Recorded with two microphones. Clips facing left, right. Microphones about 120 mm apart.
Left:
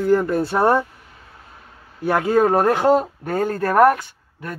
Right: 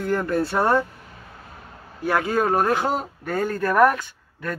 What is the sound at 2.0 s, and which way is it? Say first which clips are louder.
Speech: left 4 dB; 25° left (ahead or behind).